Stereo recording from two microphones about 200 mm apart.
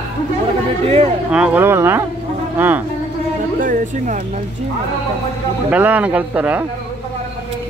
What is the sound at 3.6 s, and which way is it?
Speech, 40° right (ahead or behind).